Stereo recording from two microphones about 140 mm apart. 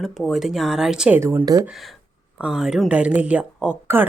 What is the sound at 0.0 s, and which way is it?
A woman's voice, centre (ahead or behind).